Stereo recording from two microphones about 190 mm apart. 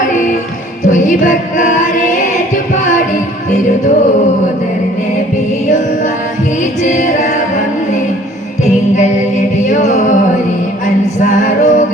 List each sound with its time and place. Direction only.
0.9 s music: 40° left (ahead or behind)
6.8 s music: 40° left (ahead or behind)
9.6 s music: 40° left (ahead or behind)
11.2 s music: 40° left (ahead or behind)